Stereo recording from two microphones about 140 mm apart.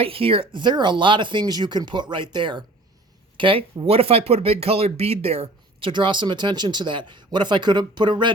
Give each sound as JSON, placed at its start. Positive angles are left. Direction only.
{"t": 0.0, "sound": "speech", "side_deg": -40}
{"t": 5.9, "sound": "speech", "side_deg": -35}